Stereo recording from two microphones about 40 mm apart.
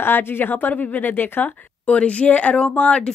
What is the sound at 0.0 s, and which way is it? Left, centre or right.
A woman's voice, left.